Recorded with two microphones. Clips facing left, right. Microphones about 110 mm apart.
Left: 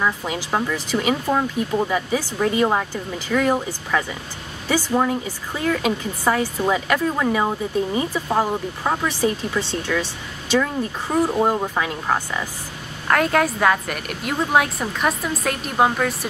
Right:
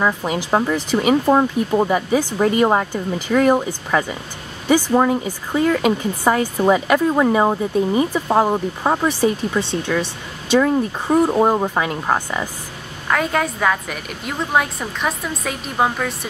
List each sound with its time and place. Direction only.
0.0 s speech: 20° right (ahead or behind)
6.9 s speech: 30° right (ahead or behind)
11.3 s speech: 25° right (ahead or behind)
13.1 s a woman's voice: centre (ahead or behind)